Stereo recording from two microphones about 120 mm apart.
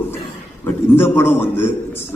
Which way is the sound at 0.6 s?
20° left (ahead or behind).